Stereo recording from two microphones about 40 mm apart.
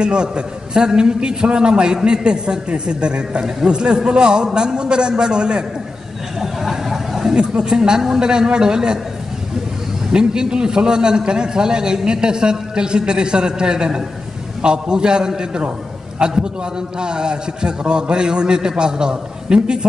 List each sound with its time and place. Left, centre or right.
0.0 s a man's voice: right
6.4 s a sound: centre
7.3 s a man's voice: right
10.1 s a man's voice: centre